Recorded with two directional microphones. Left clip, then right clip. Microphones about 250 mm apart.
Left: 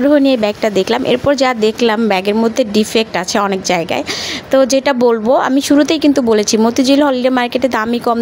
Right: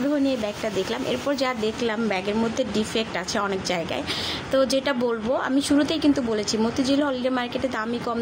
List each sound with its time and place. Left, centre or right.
0.1 s speech: left